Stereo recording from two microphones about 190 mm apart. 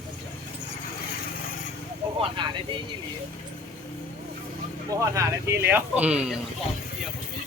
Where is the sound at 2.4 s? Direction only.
25° right (ahead or behind).